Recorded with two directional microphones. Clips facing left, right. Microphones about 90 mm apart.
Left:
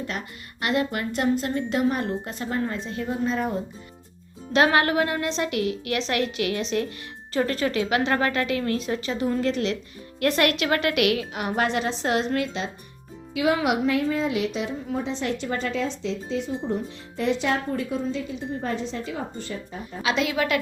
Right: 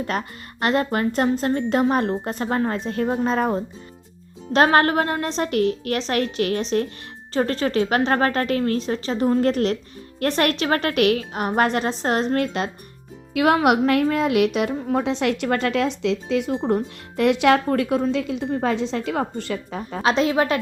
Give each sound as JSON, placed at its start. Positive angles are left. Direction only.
{"t": 0.1, "sound": "a woman's voice", "side_deg": -45}
{"t": 10.2, "sound": "a woman's voice", "side_deg": -35}
{"t": 13.3, "sound": "a woman's voice", "side_deg": -60}
{"t": 15.2, "sound": "speech", "side_deg": -75}
{"t": 20.0, "sound": "a woman's voice", "side_deg": -40}